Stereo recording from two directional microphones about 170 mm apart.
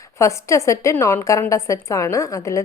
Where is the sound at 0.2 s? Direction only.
15° left (ahead or behind).